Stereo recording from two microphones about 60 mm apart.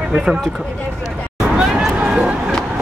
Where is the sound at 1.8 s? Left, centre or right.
Centre.